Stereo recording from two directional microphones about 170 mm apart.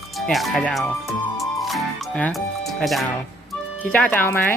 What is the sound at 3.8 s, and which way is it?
Speech, 10° left (ahead or behind).